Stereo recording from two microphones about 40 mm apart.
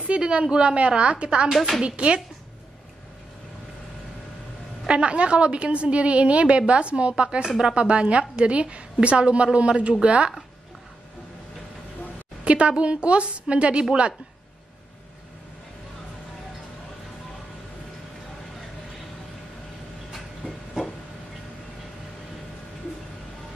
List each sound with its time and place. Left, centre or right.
0.0 s a woman's voice: right
1.5 s speech: centre
1.8 s a woman's voice: right
4.8 s a woman's voice: right
12.4 s a woman's voice: right